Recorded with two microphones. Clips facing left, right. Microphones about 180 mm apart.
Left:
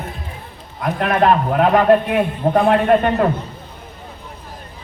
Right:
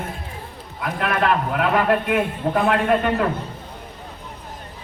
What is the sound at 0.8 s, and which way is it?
A man's voice, 45° left (ahead or behind).